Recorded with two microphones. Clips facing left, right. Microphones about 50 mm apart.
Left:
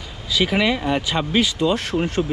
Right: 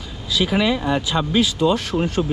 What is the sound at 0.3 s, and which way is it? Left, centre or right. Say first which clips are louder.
Speech: even; left.